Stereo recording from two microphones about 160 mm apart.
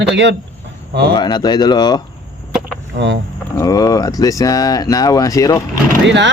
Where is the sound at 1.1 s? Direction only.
25° left (ahead or behind).